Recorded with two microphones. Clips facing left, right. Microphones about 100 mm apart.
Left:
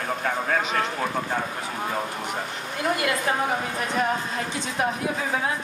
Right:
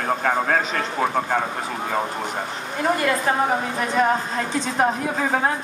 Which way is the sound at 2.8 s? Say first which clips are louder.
Right 4 dB; 40° right (ahead or behind).